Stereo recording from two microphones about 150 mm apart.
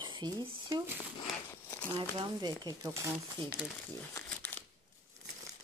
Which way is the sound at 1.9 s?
30° right (ahead or behind).